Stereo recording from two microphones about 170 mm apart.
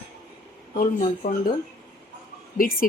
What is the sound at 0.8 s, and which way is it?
Speech, 50° left (ahead or behind).